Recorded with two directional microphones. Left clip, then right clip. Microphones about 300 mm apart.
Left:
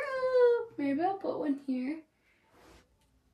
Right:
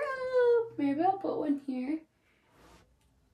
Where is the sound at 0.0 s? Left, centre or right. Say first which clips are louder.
Left 2 dB; centre.